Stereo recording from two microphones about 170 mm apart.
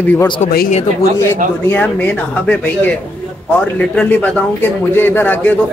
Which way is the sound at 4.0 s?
10° left (ahead or behind).